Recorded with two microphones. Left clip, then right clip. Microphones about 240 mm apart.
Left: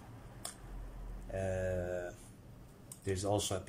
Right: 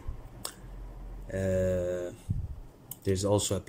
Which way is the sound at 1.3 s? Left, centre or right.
Centre.